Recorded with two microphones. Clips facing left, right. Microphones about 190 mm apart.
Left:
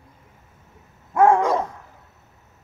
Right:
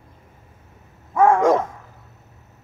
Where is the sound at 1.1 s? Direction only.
10° left (ahead or behind).